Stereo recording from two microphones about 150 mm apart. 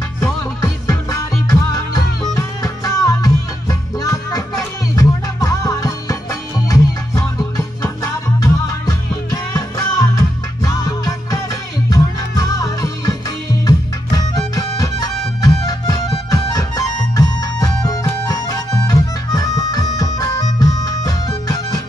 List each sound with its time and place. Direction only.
0.2 s music: 20° left (ahead or behind)